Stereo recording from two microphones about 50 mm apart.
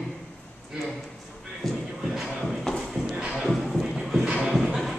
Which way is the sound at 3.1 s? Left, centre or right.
Centre.